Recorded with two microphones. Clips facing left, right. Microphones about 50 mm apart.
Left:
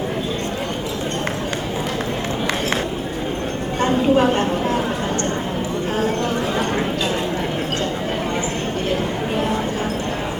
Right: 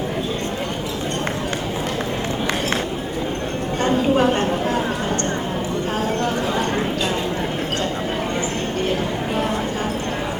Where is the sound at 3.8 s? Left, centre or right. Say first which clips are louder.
Left 1 dB; left.